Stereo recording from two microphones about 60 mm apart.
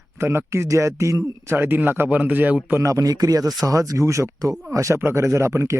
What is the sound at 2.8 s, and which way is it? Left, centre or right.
Speech, right.